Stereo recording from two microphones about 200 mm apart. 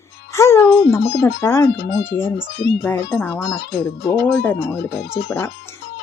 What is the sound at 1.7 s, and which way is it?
Speech, 55° left (ahead or behind).